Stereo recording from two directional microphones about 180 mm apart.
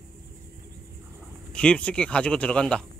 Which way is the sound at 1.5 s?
5° left (ahead or behind).